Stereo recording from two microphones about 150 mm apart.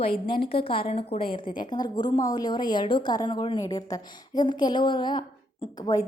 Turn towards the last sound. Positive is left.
turn(degrees=25)  # may be behind; listen again after turning